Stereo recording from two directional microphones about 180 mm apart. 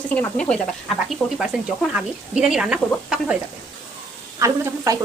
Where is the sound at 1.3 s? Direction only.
5° right (ahead or behind).